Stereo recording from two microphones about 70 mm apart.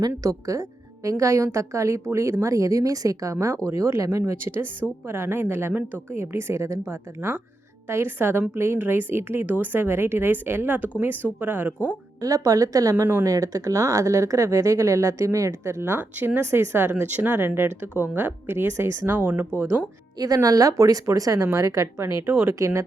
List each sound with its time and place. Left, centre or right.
0.2 s a woman's voice: right
3.7 s speech: right
4.3 s a woman's voice: right
6.1 s a woman's voice: right
12.2 s a woman's voice: right
20.1 s speech: right
22.5 s speech: right